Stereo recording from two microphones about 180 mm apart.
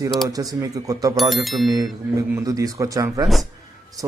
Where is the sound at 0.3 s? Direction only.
20° right (ahead or behind).